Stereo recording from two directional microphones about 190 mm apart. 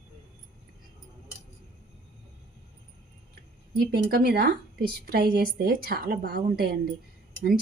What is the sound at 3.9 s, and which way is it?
A woman's voice, 55° right (ahead or behind).